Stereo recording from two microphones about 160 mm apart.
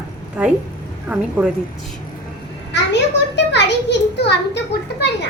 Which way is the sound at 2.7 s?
90° left.